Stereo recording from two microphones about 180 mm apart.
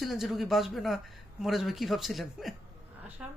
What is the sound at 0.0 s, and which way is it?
Speech, centre (ahead or behind).